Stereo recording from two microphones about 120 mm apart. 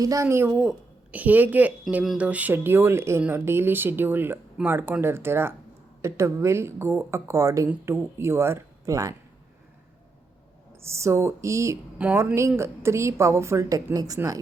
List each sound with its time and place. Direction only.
0.0 s speech: 25° right (ahead or behind)
0.5 s speech: 5° right (ahead or behind); by 9.1 s 30° right (ahead or behind)
10.8 s speech: 25° right (ahead or behind)
11.9 s speech: 10° right (ahead or behind)
12.2 s speech: 20° right (ahead or behind)